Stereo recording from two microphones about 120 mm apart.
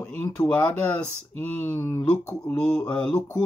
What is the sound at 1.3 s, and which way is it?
Speech, 15° left (ahead or behind).